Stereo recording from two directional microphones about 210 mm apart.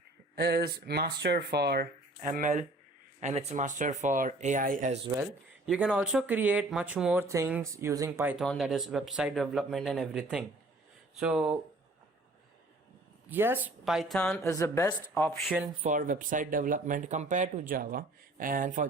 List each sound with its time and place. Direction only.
0.3 s speech: 50° right (ahead or behind)
5.6 s speech: 5° right (ahead or behind)
13.3 s speech: 10° right (ahead or behind)
14.4 s speech: 15° left (ahead or behind)
15.8 s speech: 35° right (ahead or behind)